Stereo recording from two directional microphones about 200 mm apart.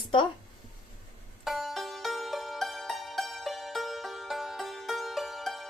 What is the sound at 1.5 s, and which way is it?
Music, centre (ahead or behind).